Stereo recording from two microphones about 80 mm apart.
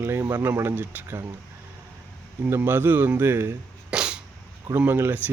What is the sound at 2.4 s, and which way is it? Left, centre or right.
Speech, right.